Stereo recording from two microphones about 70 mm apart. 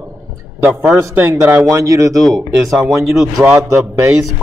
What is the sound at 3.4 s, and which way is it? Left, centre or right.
Speech, right.